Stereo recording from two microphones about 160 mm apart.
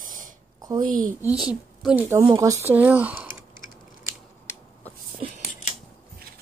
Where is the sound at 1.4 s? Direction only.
5° right (ahead or behind).